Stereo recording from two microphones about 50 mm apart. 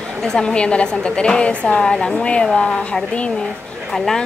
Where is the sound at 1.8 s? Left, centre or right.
Centre.